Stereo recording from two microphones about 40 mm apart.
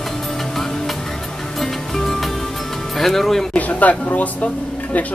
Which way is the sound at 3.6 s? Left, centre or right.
Left.